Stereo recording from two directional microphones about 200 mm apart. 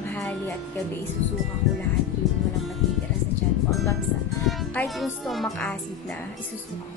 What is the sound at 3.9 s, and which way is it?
A woman's voice, centre (ahead or behind).